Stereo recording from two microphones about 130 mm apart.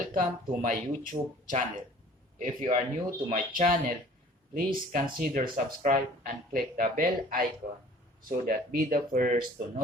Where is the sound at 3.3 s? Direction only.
90° right.